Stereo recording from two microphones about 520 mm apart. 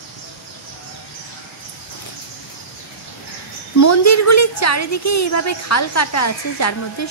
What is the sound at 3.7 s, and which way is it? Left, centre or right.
A woman's voice, left.